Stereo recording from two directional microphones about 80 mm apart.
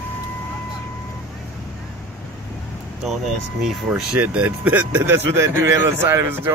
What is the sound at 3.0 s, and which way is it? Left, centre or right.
Speech, centre.